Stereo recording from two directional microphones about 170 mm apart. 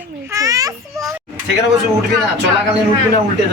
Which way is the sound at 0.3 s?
20° right (ahead or behind).